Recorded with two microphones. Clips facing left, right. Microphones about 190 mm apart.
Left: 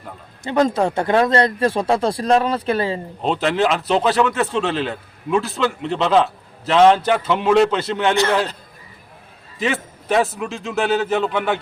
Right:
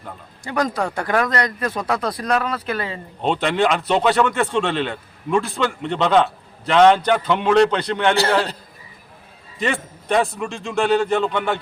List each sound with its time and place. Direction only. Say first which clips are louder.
0.4 s speech: left 5 dB; 25° left (ahead or behind)
3.2 s a man's voice: even; centre (ahead or behind)
8.1 s a man's voice: left 2 dB; 35° right (ahead or behind)
9.6 s a man's voice: left 1 dB; centre (ahead or behind)